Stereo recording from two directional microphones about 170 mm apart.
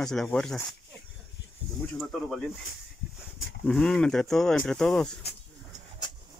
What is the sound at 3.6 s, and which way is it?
Speech, 5° left (ahead or behind).